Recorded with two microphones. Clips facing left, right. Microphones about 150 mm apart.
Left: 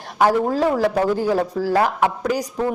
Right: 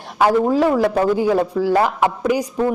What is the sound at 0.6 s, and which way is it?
Speech, 5° right (ahead or behind).